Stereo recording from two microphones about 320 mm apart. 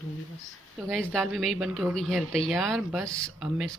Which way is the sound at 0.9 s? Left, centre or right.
Centre.